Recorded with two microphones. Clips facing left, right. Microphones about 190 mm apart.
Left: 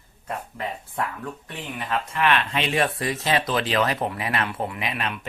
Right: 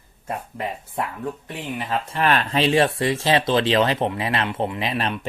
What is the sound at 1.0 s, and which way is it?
Speech, 25° right (ahead or behind).